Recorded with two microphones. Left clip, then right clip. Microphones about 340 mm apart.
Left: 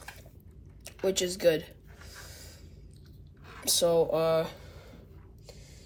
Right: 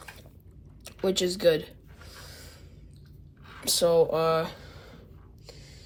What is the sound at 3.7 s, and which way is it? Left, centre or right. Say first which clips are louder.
Speech: right 3 dB; centre.